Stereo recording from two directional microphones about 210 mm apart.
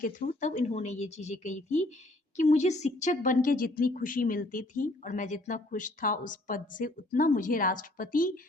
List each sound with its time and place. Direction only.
0.0 s a woman's voice: 40° left (ahead or behind)